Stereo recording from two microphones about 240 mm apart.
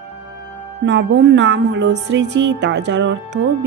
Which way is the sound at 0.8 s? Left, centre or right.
Right.